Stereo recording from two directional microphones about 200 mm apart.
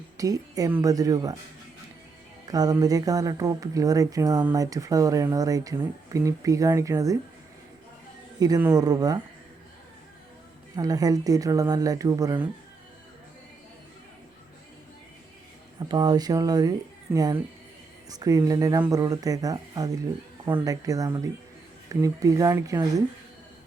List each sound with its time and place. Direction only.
0.2 s speech: 15° right (ahead or behind)
2.5 s speech: 20° right (ahead or behind)
8.4 s speech: 20° right (ahead or behind)
10.8 s speech: 20° right (ahead or behind)
15.8 s speech: 20° right (ahead or behind)